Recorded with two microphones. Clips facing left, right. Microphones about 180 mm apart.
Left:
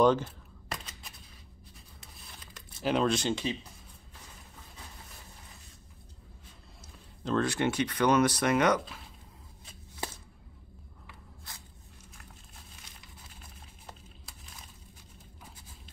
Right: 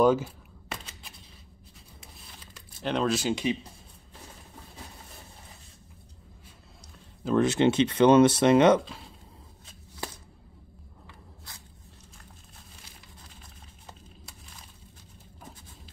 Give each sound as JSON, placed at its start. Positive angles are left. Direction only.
{"t": 0.0, "sound": "a sound", "side_deg": -5}
{"t": 2.8, "sound": "speech", "side_deg": 5}
{"t": 7.3, "sound": "speech", "side_deg": -20}